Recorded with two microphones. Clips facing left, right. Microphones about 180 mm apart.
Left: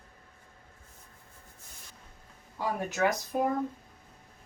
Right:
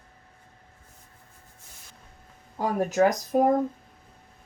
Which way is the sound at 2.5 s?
40° right (ahead or behind).